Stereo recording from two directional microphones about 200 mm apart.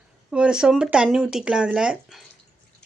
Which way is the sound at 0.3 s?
5° right (ahead or behind).